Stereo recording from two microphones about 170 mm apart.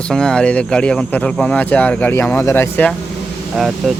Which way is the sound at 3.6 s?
Centre (ahead or behind).